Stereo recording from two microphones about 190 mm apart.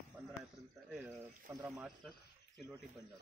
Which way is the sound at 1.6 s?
5° right (ahead or behind).